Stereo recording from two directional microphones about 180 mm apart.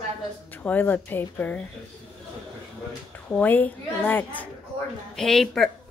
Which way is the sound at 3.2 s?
10° left (ahead or behind).